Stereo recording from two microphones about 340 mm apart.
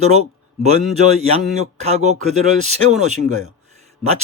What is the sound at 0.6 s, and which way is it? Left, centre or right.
A man's voice, centre.